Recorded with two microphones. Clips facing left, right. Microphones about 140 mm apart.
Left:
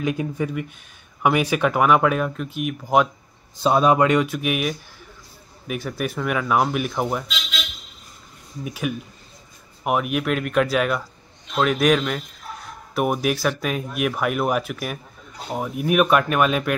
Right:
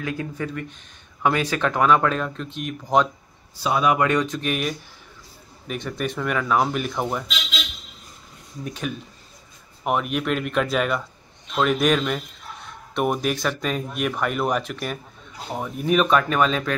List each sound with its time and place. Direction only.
0.0 s speech: 15° left (ahead or behind)
3.6 s speech: 30° left (ahead or behind)
4.0 s speech: 15° left (ahead or behind)
8.6 s speech: 10° left (ahead or behind)